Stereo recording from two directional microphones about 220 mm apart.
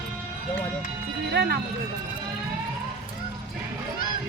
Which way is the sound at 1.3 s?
45° right (ahead or behind).